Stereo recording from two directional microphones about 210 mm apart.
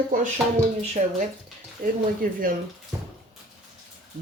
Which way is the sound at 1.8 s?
45° right (ahead or behind).